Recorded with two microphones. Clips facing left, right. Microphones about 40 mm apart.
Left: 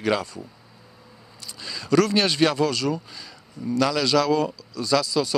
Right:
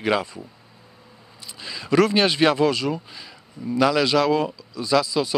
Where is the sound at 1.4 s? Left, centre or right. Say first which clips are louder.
Right 1 dB; centre.